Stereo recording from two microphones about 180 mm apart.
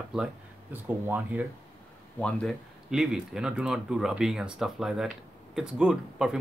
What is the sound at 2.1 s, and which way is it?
Speech, 5° left (ahead or behind).